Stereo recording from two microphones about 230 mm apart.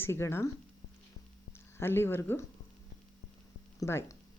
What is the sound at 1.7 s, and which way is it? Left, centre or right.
Speech, centre.